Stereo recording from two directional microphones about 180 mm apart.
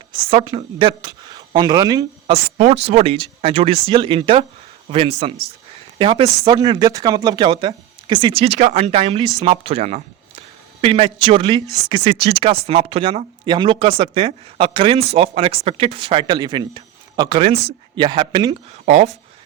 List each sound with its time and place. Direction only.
0.3 s a woman's voice: 30° right (ahead or behind)
2.3 s speech: 35° right (ahead or behind)
18.9 s speech: 35° right (ahead or behind)